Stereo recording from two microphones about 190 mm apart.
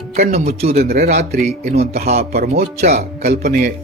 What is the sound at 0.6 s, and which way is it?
Speech, 30° right (ahead or behind).